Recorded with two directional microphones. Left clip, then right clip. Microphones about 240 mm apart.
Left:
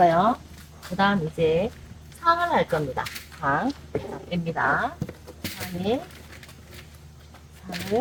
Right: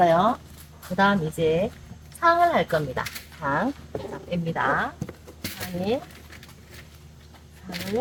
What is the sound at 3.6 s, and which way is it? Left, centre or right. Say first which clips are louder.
Speech: left 1 dB; centre.